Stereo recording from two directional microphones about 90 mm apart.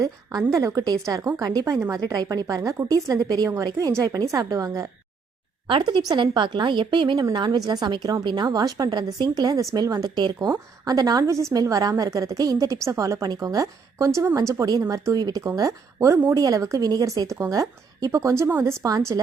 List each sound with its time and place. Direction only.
0.0 s a woman's voice: 45° right (ahead or behind)
5.6 s a woman's voice: 65° right (ahead or behind)
8.4 s a woman's voice: 40° right (ahead or behind)